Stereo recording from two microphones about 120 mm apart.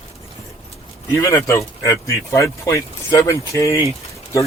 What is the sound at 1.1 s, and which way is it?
Speech, 25° left (ahead or behind).